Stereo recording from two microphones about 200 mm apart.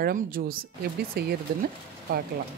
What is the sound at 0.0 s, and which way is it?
Speech, 45° right (ahead or behind).